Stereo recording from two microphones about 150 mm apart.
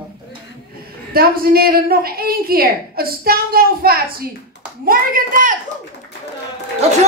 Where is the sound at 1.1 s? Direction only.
85° right; by 5.5 s 65° right (ahead or behind).